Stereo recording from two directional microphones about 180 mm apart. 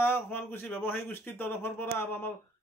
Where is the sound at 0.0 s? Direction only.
10° left (ahead or behind).